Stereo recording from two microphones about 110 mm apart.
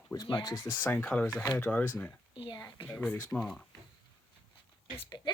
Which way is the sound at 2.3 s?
45° left (ahead or behind).